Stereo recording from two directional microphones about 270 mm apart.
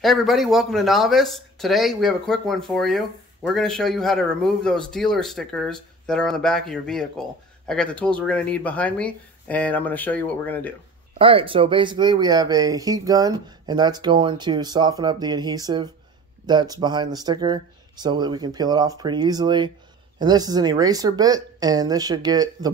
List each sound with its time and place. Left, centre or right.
0.0 s a man's voice: centre
11.1 s speech: centre